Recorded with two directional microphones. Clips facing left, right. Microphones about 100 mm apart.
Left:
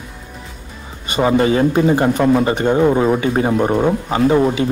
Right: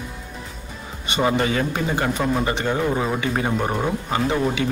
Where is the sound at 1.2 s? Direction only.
30° left (ahead or behind).